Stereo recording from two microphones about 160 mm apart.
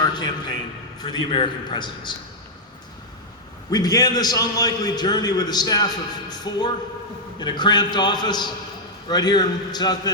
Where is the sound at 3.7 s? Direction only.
25° left (ahead or behind).